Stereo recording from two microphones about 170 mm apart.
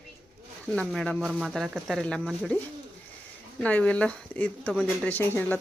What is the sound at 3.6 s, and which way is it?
Speech, 10° left (ahead or behind).